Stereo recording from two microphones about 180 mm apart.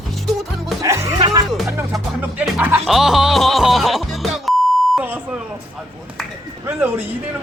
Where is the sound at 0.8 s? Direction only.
15° right (ahead or behind).